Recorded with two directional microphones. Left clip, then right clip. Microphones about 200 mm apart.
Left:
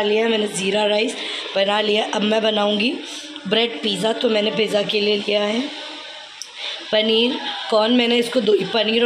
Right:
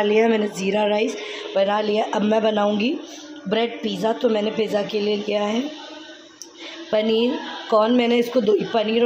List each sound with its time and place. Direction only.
0.1 s a woman's voice: 15° right (ahead or behind)
6.9 s speech: 5° right (ahead or behind)